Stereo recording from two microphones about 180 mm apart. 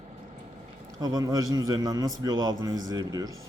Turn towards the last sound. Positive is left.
turn(degrees=-20)  # may be behind; listen again after turning